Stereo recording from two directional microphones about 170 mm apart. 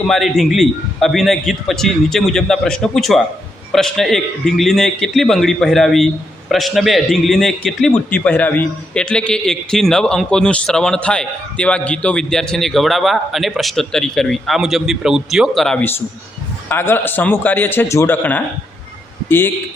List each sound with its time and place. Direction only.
0.1 s a man's voice: centre (ahead or behind)